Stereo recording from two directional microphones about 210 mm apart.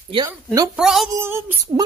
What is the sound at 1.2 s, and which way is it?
Female singing, 10° right (ahead or behind).